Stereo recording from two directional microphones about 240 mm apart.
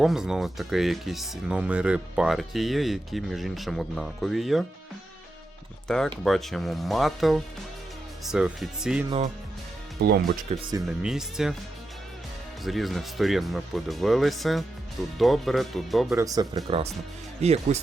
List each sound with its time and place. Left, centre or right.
0.0 s speech: centre
5.9 s speech: centre
10.0 s speech: right
10.5 s speech: centre
10.8 s speech: centre
12.6 s speech: centre
16.1 s speech: centre